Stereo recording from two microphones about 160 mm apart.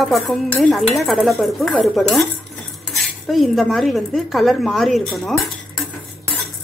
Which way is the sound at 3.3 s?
Centre (ahead or behind).